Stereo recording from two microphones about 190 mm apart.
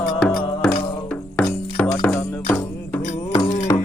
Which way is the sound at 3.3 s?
40° left (ahead or behind).